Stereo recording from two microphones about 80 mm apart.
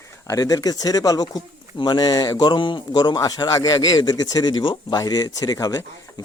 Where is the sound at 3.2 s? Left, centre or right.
Left.